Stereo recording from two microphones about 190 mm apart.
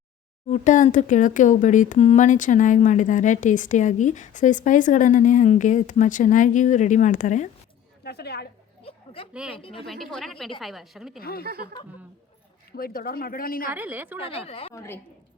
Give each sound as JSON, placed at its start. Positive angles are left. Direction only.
{"t": 0.4, "sound": "speech", "side_deg": 40}
{"t": 8.0, "sound": "a woman's voice", "side_deg": 60}
{"t": 8.8, "sound": "a sound", "side_deg": 30}
{"t": 9.3, "sound": "a woman's voice", "side_deg": -5}
{"t": 9.6, "sound": "speech", "side_deg": 30}
{"t": 9.8, "sound": "a woman's voice", "side_deg": 0}
{"t": 11.2, "sound": "speech", "side_deg": 50}
{"t": 12.7, "sound": "speech", "side_deg": 50}
{"t": 13.7, "sound": "a woman's voice", "side_deg": -10}
{"t": 14.2, "sound": "speech", "side_deg": 30}
{"t": 14.7, "sound": "a woman's voice", "side_deg": 15}